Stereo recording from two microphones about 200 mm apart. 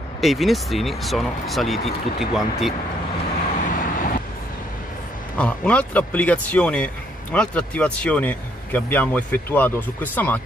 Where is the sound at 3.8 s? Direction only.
40° left (ahead or behind).